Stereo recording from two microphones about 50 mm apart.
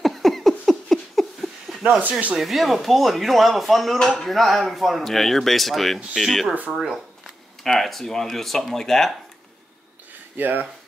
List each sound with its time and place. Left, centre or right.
0.0 s a sound: centre
2.0 s speech: right
2.3 s speech: centre
7.6 s speech: centre
10.3 s speech: right